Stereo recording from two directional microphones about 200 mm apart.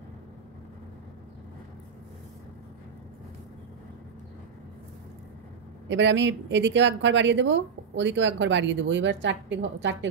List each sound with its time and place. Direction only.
5.9 s speech: 65° right (ahead or behind)